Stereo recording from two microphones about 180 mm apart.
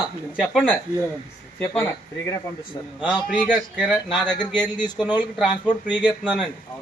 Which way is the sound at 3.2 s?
10° right (ahead or behind).